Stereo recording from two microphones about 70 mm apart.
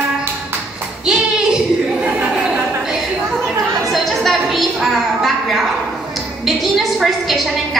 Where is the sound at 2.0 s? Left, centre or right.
Right.